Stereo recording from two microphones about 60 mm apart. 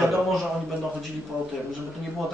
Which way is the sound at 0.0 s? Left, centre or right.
Centre.